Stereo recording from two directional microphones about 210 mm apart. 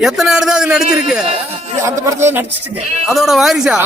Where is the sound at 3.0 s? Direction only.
Centre (ahead or behind).